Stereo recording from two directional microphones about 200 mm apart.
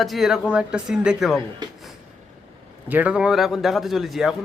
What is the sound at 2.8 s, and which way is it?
Speech, 10° right (ahead or behind).